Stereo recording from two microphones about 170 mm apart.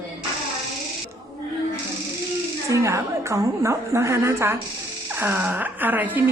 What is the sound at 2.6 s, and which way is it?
A woman's voice, 20° right (ahead or behind).